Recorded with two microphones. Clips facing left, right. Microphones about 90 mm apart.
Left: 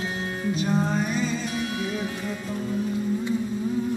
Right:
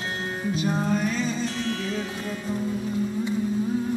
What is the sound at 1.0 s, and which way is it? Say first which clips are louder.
Music: even; 15° left (ahead or behind).